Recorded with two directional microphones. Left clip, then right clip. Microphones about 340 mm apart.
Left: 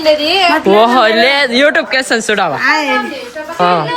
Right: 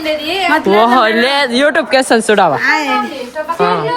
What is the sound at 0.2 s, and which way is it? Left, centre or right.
Speech, centre.